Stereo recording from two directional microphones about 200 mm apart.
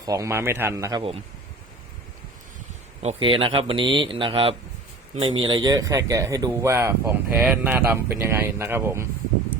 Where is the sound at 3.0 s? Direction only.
30° right (ahead or behind).